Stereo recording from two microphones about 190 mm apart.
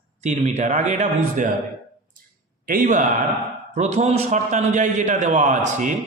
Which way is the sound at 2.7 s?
45° right (ahead or behind).